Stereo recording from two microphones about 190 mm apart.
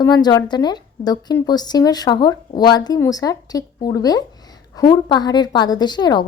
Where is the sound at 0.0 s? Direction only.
20° left (ahead or behind).